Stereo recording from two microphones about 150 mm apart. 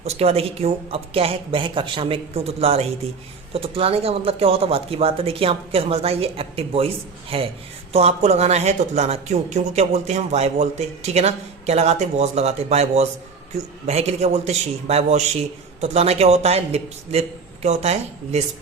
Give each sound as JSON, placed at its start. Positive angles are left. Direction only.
{"t": 0.0, "sound": "speech", "side_deg": -45}